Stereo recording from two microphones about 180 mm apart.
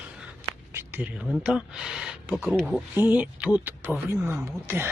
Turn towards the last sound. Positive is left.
turn(degrees=-15)  # may be behind; listen again after turning